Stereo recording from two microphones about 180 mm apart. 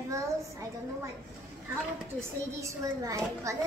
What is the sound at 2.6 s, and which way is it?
Speech, 15° right (ahead or behind).